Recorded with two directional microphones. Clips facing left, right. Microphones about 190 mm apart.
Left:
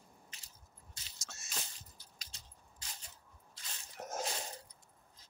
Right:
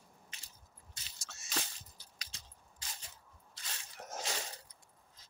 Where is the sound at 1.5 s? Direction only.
90° right.